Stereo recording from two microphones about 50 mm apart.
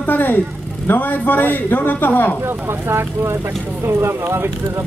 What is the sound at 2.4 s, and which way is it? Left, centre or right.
Speech, right.